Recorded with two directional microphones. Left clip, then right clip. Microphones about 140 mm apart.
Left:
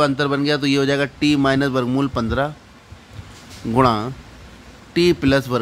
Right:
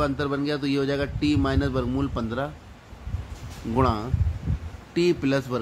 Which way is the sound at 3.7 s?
45° left (ahead or behind).